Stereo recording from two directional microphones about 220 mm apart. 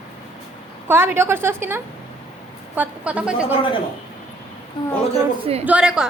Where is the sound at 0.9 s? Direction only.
10° right (ahead or behind).